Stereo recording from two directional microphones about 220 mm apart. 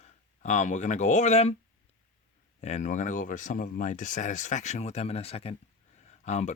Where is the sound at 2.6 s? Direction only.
30° left (ahead or behind).